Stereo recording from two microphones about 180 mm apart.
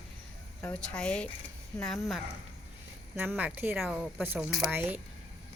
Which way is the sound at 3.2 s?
10° right (ahead or behind).